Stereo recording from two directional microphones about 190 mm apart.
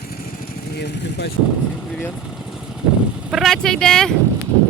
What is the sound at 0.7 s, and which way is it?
Speech, 60° left (ahead or behind).